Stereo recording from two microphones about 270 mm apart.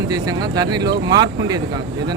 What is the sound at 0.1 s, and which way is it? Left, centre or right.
Speech, centre.